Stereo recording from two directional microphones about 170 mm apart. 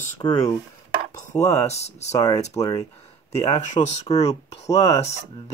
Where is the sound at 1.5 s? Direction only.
40° left (ahead or behind).